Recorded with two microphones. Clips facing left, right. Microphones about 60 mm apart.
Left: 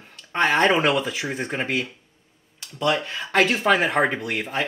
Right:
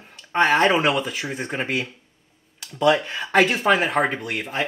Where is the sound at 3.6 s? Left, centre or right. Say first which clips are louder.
Even; centre.